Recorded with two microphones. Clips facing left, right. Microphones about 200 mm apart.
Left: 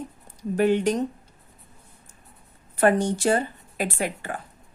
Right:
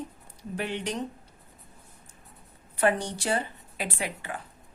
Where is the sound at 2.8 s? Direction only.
50° left (ahead or behind).